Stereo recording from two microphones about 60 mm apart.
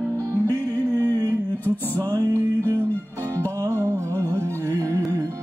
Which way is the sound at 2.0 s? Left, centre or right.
Right.